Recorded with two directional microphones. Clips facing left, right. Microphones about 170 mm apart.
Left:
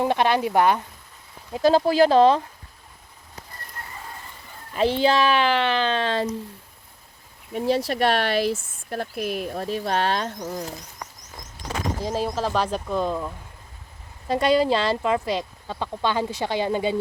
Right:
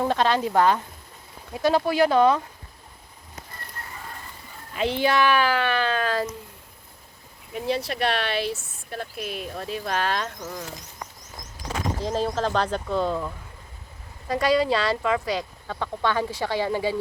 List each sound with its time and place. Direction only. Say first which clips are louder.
0.0 s speech: left 1 dB; 15° left (ahead or behind)
1.5 s speech: left 3 dB; 30° left (ahead or behind)
4.7 s speech: left 3 dB; 30° left (ahead or behind)
7.5 s speech: left 4 dB; 40° left (ahead or behind)
12.0 s speech: right 1 dB; 10° left (ahead or behind)
14.3 s speech: left 2 dB; 25° left (ahead or behind)